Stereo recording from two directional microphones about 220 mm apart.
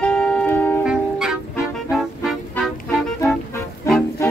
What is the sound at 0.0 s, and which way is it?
Music, 5° left (ahead or behind).